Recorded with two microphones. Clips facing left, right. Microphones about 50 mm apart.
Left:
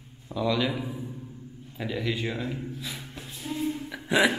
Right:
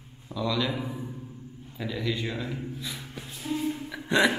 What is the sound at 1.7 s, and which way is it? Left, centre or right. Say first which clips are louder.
Speech: left 1 dB; centre.